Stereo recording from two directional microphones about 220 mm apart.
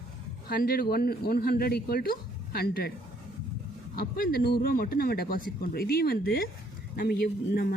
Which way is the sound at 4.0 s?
45° left (ahead or behind).